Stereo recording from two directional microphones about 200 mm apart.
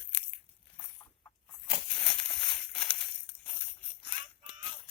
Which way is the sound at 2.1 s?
5° left (ahead or behind).